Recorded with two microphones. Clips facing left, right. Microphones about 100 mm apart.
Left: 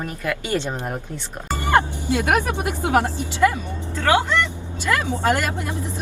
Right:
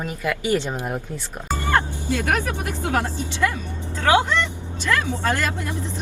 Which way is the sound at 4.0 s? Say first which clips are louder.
Right 1 dB; 15° right (ahead or behind).